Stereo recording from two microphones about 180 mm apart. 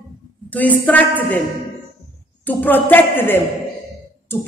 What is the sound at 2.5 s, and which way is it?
A man's voice, 10° left (ahead or behind).